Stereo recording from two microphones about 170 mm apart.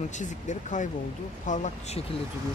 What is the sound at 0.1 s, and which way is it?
Speech, 45° left (ahead or behind).